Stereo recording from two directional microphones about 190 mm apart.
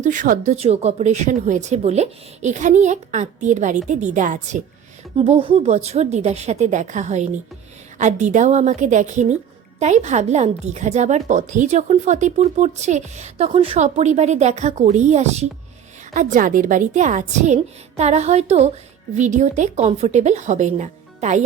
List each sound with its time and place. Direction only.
0.0 s speech: 45° right (ahead or behind)
5.1 s speech: 30° right (ahead or behind)